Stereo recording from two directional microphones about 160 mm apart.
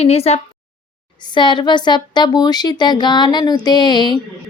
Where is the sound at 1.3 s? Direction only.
30° left (ahead or behind).